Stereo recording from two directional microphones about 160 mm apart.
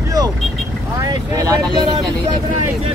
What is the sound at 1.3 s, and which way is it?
Speech, 20° right (ahead or behind).